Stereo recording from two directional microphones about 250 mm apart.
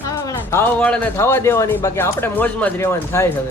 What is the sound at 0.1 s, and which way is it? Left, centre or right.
A man's voice, centre.